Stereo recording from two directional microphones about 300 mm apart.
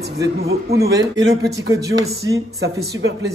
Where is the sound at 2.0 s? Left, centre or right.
Centre.